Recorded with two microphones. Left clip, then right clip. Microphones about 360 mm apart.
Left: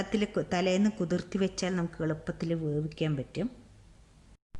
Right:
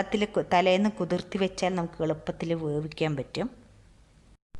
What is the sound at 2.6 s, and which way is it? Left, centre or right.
Speech, right.